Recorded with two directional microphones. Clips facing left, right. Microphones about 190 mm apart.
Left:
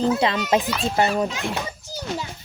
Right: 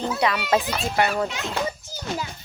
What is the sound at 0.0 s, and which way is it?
A woman's voice, 25° left (ahead or behind).